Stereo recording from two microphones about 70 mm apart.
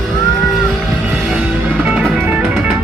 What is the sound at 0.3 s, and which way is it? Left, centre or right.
Boat, centre.